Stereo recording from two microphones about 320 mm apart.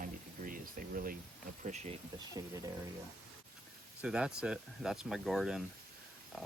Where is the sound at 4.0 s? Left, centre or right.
Centre.